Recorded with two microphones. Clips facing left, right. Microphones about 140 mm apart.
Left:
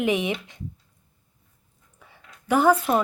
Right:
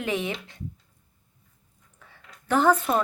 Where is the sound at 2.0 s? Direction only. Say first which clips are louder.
Left 2 dB; 10° left (ahead or behind).